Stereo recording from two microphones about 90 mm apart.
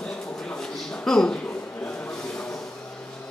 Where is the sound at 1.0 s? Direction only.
10° left (ahead or behind).